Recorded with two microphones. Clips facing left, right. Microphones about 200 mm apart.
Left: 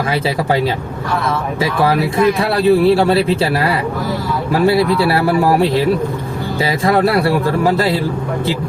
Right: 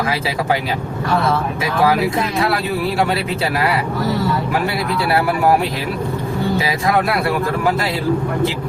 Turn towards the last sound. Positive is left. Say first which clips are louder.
# left 4 dB
turn(degrees=35)  # may be behind; listen again after turning